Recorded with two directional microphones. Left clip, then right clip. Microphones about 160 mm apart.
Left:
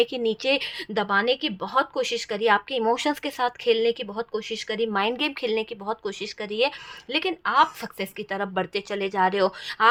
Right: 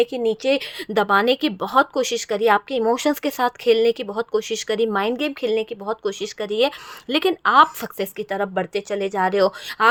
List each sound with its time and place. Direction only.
0.0 s a woman's voice: 15° right (ahead or behind)
0.9 s speech: 40° right (ahead or behind)
4.1 s speech: 50° right (ahead or behind); by 9.9 s 30° right (ahead or behind)